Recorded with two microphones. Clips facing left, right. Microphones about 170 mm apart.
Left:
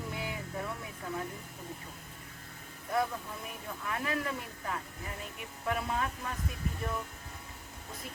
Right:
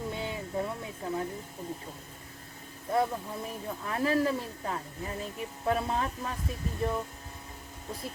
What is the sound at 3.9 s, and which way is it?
Speech, 30° right (ahead or behind).